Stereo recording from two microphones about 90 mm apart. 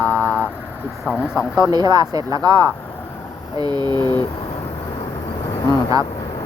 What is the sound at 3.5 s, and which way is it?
Speech, 50° right (ahead or behind).